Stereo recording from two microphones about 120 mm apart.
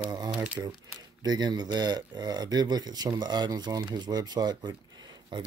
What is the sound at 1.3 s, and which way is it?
Speech, 35° right (ahead or behind).